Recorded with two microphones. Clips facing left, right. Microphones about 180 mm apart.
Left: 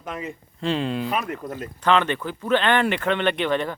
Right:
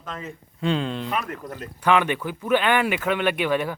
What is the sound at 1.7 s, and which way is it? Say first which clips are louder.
Speech: even; 10° right (ahead or behind).